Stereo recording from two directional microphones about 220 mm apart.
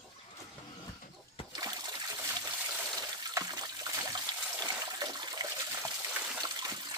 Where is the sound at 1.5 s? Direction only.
20° right (ahead or behind).